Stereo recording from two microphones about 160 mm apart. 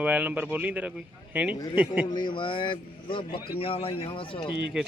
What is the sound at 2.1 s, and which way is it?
A man's voice, 30° left (ahead or behind).